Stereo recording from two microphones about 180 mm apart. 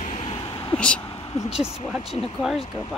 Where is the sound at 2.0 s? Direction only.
35° left (ahead or behind).